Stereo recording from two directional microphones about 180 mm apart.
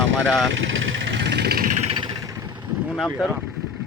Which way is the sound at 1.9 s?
25° right (ahead or behind).